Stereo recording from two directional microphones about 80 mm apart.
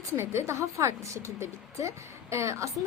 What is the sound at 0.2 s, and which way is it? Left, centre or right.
A woman's voice, right.